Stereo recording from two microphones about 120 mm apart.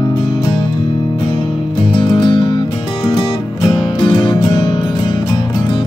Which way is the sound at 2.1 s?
40° left (ahead or behind).